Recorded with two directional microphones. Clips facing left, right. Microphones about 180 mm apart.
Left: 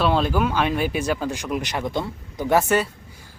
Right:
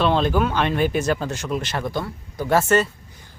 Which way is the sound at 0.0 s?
5° left (ahead or behind).